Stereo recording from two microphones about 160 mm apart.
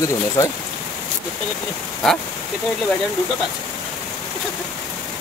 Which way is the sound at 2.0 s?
Centre (ahead or behind).